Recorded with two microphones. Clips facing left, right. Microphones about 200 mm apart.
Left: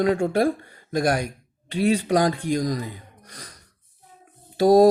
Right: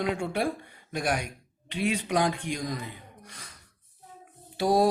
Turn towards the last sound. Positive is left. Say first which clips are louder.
# left 9 dB
turn(degrees=40)  # may be behind; listen again after turning